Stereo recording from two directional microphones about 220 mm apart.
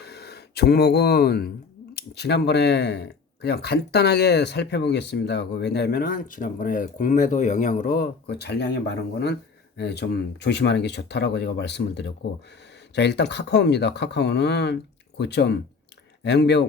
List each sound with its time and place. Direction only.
0.0 s speech: 45° left (ahead or behind)